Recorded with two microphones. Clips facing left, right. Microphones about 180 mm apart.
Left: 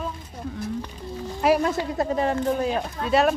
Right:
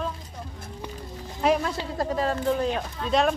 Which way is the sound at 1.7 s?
20° left (ahead or behind).